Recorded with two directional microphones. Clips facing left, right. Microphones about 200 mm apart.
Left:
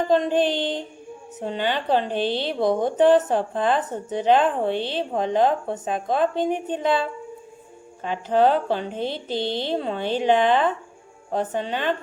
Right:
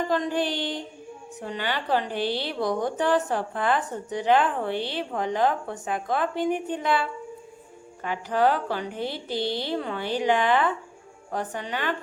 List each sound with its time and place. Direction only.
0.1 s a woman's voice: 20° left (ahead or behind)